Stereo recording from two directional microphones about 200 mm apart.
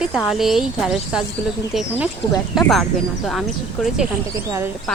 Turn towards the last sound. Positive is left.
turn(degrees=-5)  # may be behind; listen again after turning